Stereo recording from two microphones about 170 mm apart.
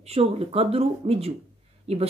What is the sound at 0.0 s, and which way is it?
Speech, 35° right (ahead or behind).